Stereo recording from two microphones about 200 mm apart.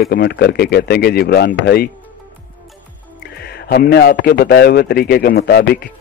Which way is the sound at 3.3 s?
55° left (ahead or behind).